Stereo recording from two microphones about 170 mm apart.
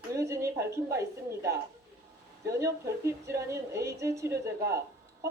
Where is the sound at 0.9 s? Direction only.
15° right (ahead or behind).